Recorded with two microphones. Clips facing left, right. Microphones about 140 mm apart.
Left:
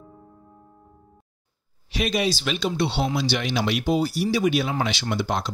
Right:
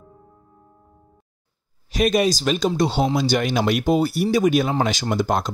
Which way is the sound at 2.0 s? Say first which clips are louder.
Right 5 dB; 45° right (ahead or behind).